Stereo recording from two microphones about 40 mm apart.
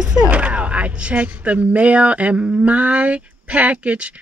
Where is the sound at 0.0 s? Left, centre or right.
Centre.